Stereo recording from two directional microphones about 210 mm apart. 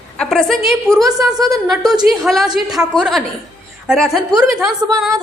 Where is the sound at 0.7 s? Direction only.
15° right (ahead or behind).